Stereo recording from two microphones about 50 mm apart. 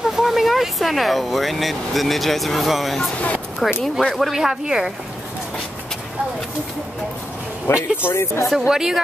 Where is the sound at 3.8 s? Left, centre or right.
Centre.